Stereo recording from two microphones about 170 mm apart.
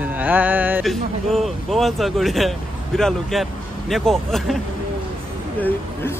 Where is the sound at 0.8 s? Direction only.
Centre (ahead or behind).